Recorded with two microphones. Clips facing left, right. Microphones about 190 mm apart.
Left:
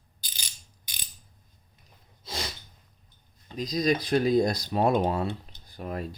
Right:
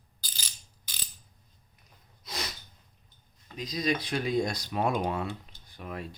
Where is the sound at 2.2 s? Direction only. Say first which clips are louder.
Left 2 dB; 30° left (ahead or behind).